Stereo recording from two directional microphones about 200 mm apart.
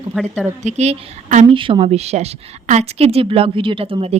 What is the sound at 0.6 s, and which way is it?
Speech, 35° right (ahead or behind).